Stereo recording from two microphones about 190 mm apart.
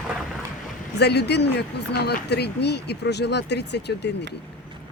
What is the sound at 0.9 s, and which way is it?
Speech, 60° left (ahead or behind).